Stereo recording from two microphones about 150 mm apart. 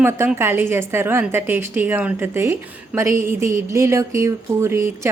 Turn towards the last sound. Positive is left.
turn(degrees=-20)  # may be behind; listen again after turning